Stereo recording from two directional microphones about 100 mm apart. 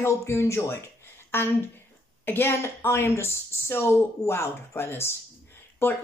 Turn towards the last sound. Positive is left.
turn(degrees=20)  # may be behind; listen again after turning